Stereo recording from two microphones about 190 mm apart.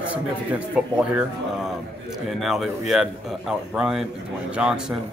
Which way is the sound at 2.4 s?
Centre (ahead or behind).